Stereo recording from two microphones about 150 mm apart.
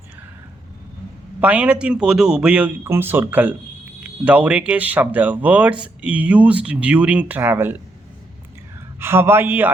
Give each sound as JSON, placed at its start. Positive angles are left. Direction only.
{"t": 1.4, "sound": "speech", "side_deg": -10}
{"t": 9.0, "sound": "speech", "side_deg": -15}